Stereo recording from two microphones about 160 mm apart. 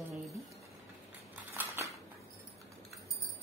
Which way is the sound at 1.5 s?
15° right (ahead or behind).